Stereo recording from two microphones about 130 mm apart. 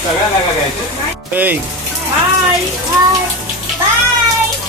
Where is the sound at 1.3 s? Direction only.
15° right (ahead or behind).